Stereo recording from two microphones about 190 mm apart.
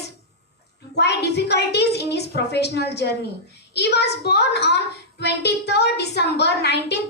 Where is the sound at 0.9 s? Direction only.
60° left (ahead or behind).